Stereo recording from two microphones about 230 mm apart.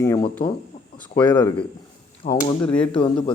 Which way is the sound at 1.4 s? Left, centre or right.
Centre.